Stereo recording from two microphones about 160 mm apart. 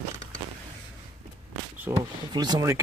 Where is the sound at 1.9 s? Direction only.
25° right (ahead or behind).